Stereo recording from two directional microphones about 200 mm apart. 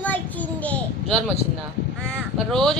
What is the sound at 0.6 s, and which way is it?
Speech, 5° left (ahead or behind).